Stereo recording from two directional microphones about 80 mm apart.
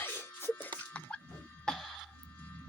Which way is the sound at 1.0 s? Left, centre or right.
Centre.